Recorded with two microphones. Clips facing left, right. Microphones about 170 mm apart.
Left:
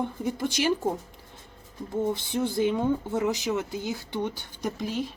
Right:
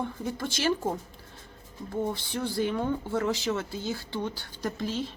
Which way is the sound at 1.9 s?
20° left (ahead or behind).